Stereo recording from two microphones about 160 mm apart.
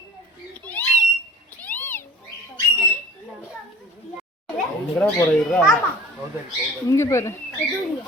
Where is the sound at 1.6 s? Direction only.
10° left (ahead or behind).